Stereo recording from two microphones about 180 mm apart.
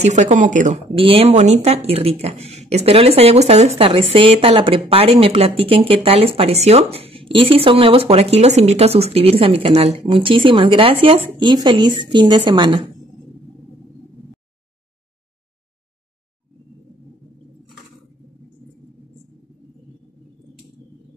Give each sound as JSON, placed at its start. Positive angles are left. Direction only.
{"t": 0.0, "sound": "speech", "side_deg": -40}